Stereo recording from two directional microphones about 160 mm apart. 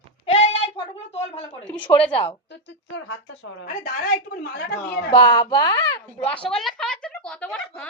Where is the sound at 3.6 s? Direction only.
65° left (ahead or behind).